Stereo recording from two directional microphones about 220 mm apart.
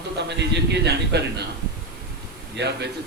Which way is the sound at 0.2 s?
50° right (ahead or behind).